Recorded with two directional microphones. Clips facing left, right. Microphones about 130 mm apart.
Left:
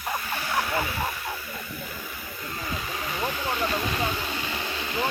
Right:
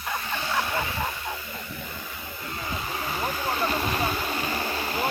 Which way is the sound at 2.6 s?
30° right (ahead or behind).